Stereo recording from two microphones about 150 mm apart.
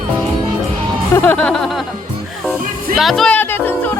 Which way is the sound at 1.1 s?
10° left (ahead or behind).